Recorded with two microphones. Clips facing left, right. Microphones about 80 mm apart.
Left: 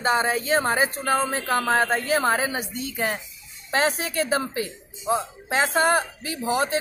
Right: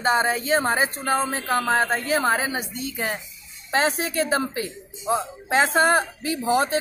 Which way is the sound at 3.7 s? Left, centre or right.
Right.